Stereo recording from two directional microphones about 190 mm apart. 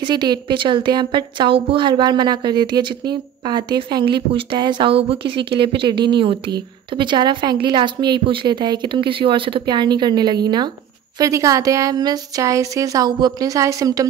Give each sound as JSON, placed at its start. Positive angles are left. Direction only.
{"t": 0.0, "sound": "a woman's voice", "side_deg": -25}